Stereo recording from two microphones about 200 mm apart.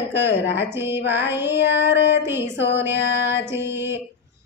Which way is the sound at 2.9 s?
60° left (ahead or behind).